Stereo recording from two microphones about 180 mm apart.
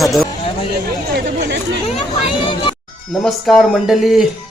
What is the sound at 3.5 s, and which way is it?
Speech, centre (ahead or behind).